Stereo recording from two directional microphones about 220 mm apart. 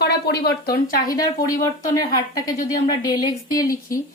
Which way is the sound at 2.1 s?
15° left (ahead or behind).